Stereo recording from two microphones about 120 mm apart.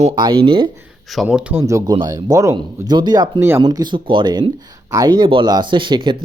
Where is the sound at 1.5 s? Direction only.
25° right (ahead or behind).